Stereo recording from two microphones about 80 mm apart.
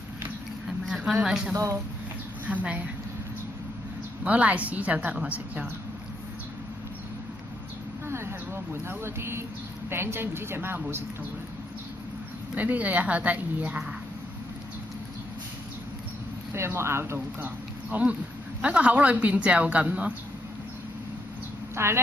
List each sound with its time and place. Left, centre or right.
0.8 s a sound: centre
2.4 s a woman's voice: centre
4.2 s a woman's voice: centre
8.1 s a sound: right
8.8 s speech: right
12.5 s a woman's voice: centre
16.5 s speech: right
17.8 s speech: centre
21.7 s speech: right